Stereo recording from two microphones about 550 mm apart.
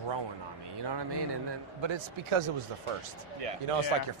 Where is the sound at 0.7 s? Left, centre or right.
Right.